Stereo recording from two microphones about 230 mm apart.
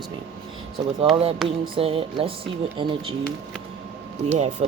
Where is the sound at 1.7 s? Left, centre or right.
Right.